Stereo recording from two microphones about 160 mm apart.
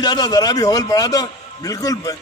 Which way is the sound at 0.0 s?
25° left (ahead or behind).